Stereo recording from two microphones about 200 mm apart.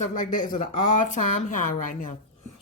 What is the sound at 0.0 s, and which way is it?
Speech, 40° left (ahead or behind).